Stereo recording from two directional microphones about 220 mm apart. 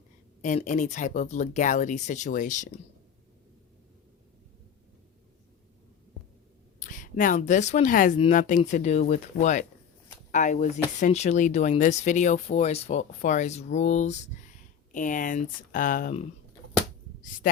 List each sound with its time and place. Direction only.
0.4 s speech: 35° left (ahead or behind)
6.7 s speech: 35° left (ahead or behind)